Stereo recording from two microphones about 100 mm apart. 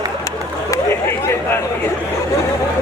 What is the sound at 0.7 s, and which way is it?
Chatter, 25° left (ahead or behind).